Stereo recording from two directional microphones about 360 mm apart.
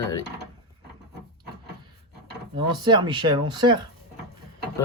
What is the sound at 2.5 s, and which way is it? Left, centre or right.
Speech, centre.